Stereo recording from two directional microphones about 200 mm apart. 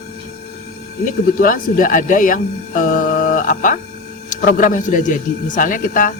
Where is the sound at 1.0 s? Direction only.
45° left (ahead or behind).